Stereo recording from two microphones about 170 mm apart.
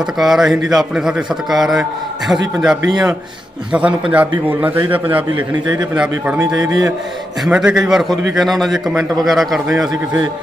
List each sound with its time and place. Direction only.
0.0 s a man's voice: centre (ahead or behind)
5.3 s a man's voice: 25° right (ahead or behind)
5.9 s a man's voice: 5° right (ahead or behind)
6.4 s a man's voice: 20° right (ahead or behind)
7.4 s a man's voice: 5° right (ahead or behind)